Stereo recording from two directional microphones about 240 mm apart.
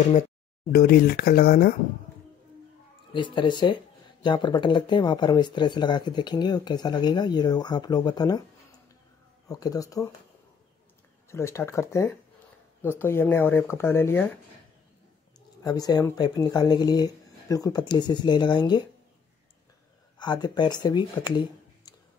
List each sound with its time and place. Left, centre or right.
0.7 s speech: left
3.1 s speech: centre
9.5 s speech: centre
11.2 s speech: centre
15.6 s speech: centre
20.2 s speech: centre